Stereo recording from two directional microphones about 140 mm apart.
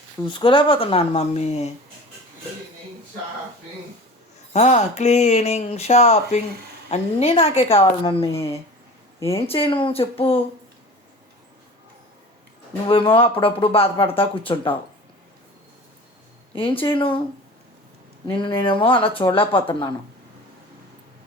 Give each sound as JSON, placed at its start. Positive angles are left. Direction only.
{"t": 0.3, "sound": "speech", "side_deg": 35}
{"t": 4.5, "sound": "speech", "side_deg": 55}
{"t": 8.3, "sound": "speech", "side_deg": 20}
{"t": 9.5, "sound": "speech", "side_deg": 40}
{"t": 12.9, "sound": "speech", "side_deg": 40}
{"t": 16.6, "sound": "speech", "side_deg": 40}
{"t": 18.3, "sound": "speech", "side_deg": 35}